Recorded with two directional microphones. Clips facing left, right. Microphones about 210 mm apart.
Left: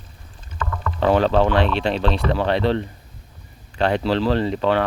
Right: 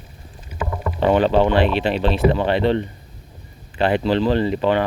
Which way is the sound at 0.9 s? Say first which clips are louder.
Right 1 dB; centre (ahead or behind).